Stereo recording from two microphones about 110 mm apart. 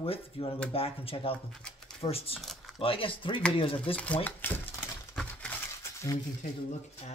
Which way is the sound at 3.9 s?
10° left (ahead or behind).